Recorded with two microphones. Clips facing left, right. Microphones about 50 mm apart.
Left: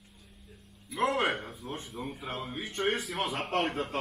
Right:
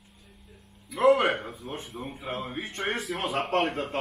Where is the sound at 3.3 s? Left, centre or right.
Right.